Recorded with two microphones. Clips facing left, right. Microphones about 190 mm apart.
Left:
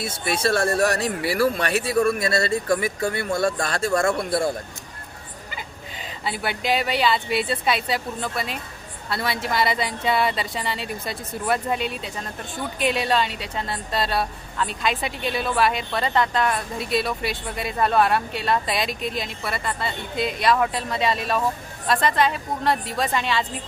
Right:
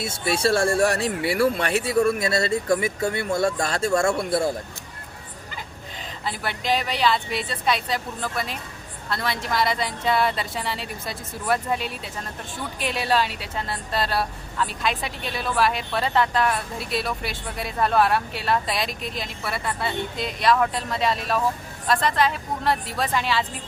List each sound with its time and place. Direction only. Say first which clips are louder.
0.0 s speech: right 1 dB; 30° right (ahead or behind)
5.5 s a woman's voice: even; 5° left (ahead or behind)